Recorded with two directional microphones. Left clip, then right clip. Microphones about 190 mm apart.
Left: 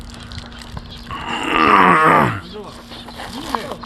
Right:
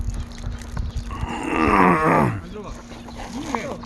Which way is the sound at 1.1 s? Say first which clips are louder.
Left 6 dB; centre (ahead or behind).